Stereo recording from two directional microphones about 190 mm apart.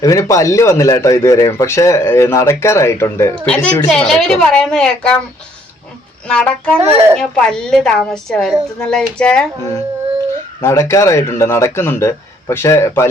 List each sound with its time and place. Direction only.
0.0 s a man's voice: 15° left (ahead or behind)
6.2 s a woman's voice: 5° left (ahead or behind)
6.7 s speech: 30° right (ahead or behind)
7.2 s a woman's voice: 5° left (ahead or behind)
10.6 s a man's voice: 15° left (ahead or behind)